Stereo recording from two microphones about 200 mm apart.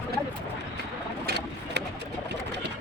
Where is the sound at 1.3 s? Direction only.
55° right (ahead or behind).